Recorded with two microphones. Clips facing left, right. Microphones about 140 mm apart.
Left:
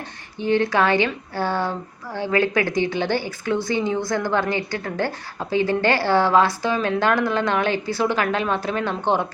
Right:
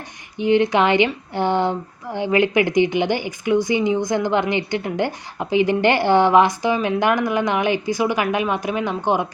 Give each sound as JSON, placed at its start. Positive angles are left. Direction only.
{"t": 0.3, "sound": "speech", "side_deg": -15}